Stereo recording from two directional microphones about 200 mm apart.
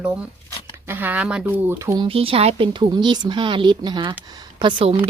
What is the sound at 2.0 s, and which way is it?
Speech, 25° right (ahead or behind).